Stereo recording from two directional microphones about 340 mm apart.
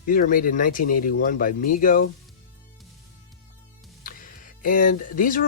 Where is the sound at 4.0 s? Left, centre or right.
Left.